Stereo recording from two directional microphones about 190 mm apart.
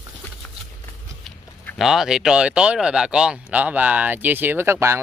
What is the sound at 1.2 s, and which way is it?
Speech, centre (ahead or behind).